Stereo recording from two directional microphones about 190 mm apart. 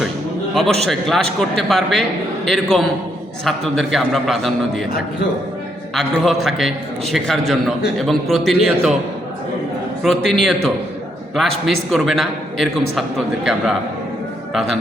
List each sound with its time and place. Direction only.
0.5 s a man's voice: centre (ahead or behind)
5.9 s a man's voice: centre (ahead or behind)
10.2 s a man's voice: centre (ahead or behind)